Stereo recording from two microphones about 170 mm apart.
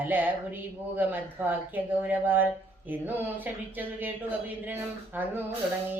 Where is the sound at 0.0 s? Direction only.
10° right (ahead or behind).